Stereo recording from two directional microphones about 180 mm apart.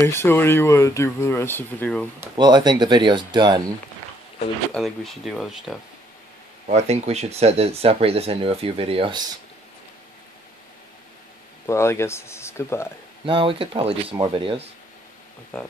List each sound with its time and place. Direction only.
0.0 s speech: 15° left (ahead or behind)
2.3 s speech: 25° right (ahead or behind)
4.7 s speech: centre (ahead or behind)
6.7 s speech: 35° right (ahead or behind)
11.6 s speech: 15° left (ahead or behind)
13.2 s speech: 30° right (ahead or behind)
15.5 s speech: 5° left (ahead or behind)